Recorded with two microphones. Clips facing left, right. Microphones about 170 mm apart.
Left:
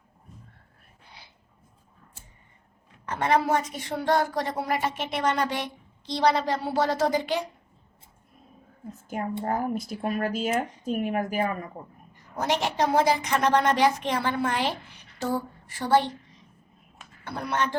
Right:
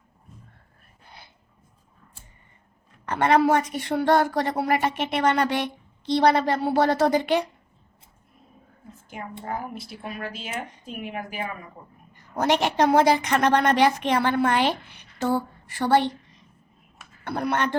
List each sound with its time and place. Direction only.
3.1 s a woman's voice: 70° right (ahead or behind)
9.0 s speech: 45° left (ahead or behind)
12.1 s a woman's voice: 65° right (ahead or behind)
17.2 s a woman's voice: 60° right (ahead or behind)